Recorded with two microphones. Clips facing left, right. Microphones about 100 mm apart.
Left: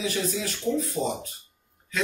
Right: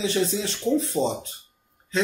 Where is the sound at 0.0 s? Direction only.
30° right (ahead or behind).